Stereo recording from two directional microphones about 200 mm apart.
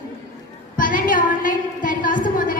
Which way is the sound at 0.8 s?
40° left (ahead or behind).